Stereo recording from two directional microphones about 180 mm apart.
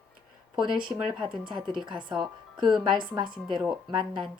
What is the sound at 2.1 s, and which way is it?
Speech, centre (ahead or behind).